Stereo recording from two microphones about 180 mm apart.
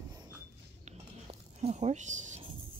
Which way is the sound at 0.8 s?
35° right (ahead or behind).